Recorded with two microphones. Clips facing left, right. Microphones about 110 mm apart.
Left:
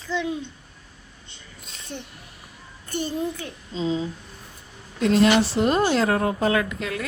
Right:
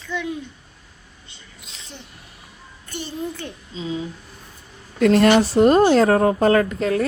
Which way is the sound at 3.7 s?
30° left (ahead or behind).